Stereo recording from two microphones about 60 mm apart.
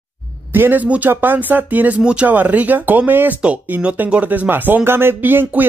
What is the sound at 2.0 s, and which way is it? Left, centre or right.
Speech, centre.